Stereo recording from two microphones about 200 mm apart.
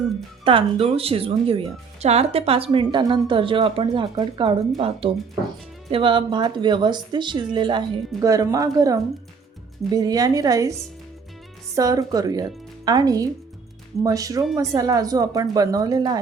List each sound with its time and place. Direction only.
0.4 s speech: 25° right (ahead or behind)